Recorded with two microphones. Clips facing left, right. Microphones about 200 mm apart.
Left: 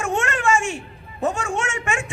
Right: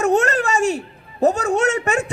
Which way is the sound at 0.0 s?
40° right (ahead or behind).